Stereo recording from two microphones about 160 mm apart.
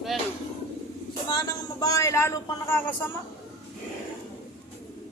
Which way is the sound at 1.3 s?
25° left (ahead or behind).